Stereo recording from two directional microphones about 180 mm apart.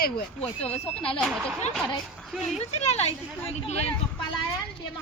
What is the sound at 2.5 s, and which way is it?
Speech, 35° left (ahead or behind).